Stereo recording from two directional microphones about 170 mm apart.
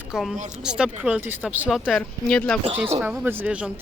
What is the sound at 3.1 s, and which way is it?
Speech, 10° right (ahead or behind).